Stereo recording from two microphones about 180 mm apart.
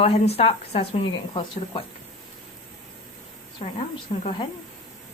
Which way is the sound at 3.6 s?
35° left (ahead or behind).